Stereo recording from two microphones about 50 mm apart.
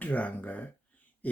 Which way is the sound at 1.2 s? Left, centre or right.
Left.